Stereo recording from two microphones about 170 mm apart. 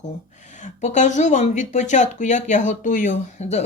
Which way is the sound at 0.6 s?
45° left (ahead or behind).